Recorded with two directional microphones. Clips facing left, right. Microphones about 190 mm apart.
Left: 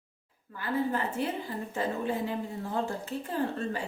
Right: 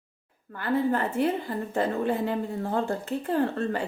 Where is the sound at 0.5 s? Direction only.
60° right (ahead or behind).